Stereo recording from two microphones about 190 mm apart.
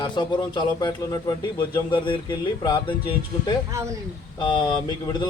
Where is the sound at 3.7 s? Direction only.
15° right (ahead or behind).